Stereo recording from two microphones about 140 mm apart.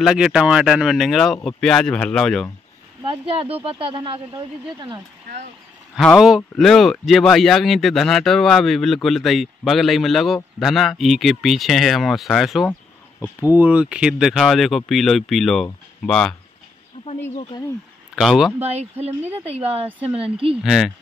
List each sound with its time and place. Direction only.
0.0 s speech: 5° right (ahead or behind)
3.0 s speech: 35° right (ahead or behind)
5.9 s speech: centre (ahead or behind)
13.4 s speech: 15° right (ahead or behind); by 16.3 s 5° left (ahead or behind)
18.1 s speech: centre (ahead or behind)
18.6 s speech: 50° right (ahead or behind)
20.6 s speech: centre (ahead or behind)